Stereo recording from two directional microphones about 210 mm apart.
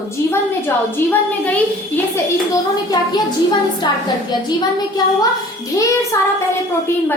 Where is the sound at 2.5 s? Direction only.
20° left (ahead or behind).